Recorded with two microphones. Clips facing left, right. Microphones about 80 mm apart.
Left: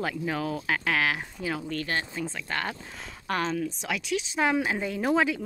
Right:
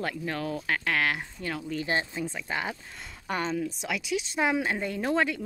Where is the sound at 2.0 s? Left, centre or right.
Centre.